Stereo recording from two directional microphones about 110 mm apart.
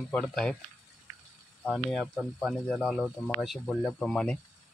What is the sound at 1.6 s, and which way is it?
Speech, 5° left (ahead or behind).